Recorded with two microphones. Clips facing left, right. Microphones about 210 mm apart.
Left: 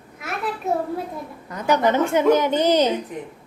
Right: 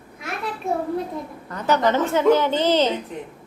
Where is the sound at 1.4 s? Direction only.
10° left (ahead or behind).